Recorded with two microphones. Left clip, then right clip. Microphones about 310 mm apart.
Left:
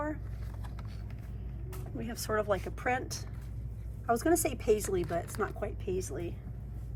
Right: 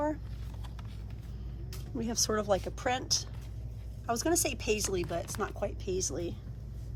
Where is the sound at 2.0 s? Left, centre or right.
Centre.